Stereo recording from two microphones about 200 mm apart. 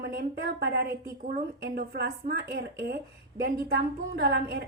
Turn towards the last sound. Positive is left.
turn(degrees=-55)  # may be behind; listen again after turning